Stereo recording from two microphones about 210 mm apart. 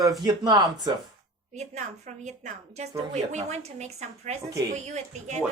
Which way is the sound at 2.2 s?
35° right (ahead or behind).